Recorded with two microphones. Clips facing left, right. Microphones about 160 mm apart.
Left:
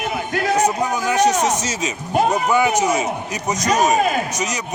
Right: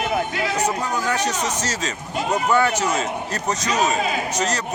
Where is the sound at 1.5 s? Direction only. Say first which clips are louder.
Left 4 dB; 20° left (ahead or behind).